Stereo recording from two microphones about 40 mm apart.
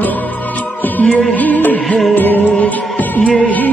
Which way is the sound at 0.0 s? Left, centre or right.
Left.